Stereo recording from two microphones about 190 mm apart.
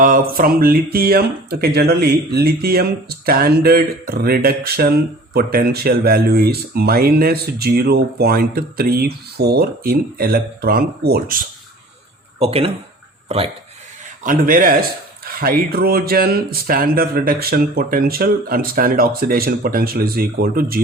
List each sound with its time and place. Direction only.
0.0 s speech: 45° right (ahead or behind)
12.4 s speech: 30° right (ahead or behind)
14.3 s speech: 45° right (ahead or behind)